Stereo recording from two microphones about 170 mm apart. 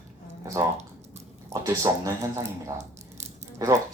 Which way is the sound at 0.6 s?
20° right (ahead or behind).